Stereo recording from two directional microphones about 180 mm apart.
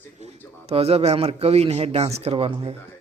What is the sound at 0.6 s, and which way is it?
Speech, 35° right (ahead or behind).